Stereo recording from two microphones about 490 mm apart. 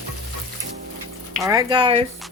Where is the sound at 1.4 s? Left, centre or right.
Centre.